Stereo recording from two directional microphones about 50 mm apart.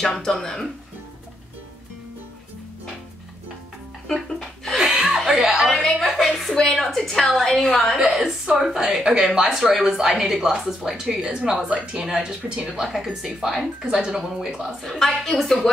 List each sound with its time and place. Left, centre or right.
0.0 s a woman's voice: centre
4.7 s chuckle: centre
5.9 s a sound: centre
6.5 s a woman's voice: centre
8.5 s speech: centre
8.8 s speech: centre
13.8 s speech: right
14.4 s speech: centre
14.8 s a woman's voice: centre